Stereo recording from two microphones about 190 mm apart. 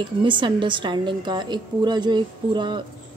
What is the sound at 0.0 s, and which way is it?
A woman's voice, 25° right (ahead or behind).